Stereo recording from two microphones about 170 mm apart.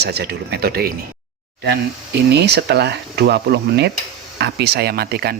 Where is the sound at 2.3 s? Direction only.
80° right.